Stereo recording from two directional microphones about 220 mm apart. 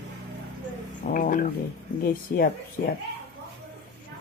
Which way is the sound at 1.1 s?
40° left (ahead or behind).